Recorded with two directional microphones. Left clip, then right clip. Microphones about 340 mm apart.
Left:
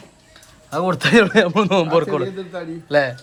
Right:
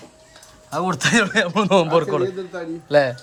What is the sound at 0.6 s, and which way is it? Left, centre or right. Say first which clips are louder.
Speech: left 2 dB; centre.